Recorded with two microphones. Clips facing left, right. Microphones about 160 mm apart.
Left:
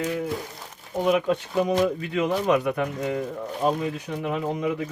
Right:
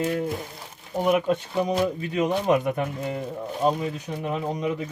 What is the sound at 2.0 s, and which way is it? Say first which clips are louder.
Speech: even; 20° right (ahead or behind).